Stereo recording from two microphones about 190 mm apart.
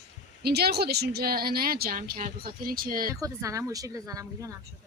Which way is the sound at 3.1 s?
15° right (ahead or behind).